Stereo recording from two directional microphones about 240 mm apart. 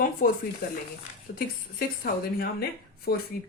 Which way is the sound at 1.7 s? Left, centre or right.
Left.